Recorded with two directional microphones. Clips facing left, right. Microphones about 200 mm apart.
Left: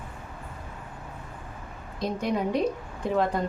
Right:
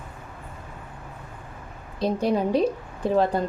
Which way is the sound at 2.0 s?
30° right (ahead or behind).